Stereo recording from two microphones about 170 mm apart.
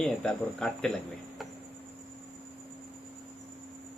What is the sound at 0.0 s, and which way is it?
Speech, 5° left (ahead or behind).